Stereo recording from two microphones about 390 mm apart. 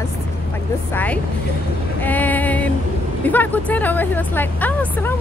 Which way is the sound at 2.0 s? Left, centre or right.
Centre.